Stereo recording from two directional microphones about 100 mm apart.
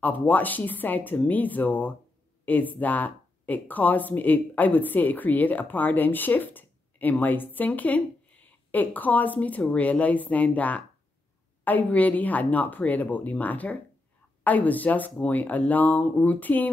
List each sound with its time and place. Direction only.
0.0 s speech: 15° left (ahead or behind)